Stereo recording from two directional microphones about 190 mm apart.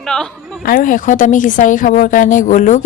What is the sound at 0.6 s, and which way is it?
A woman's voice, 45° left (ahead or behind).